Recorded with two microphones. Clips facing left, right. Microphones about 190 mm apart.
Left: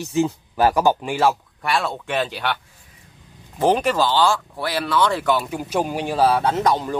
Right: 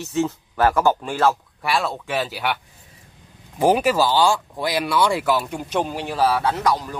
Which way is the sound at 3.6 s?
10° right (ahead or behind).